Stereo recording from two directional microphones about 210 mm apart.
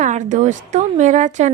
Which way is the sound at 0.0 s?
35° right (ahead or behind).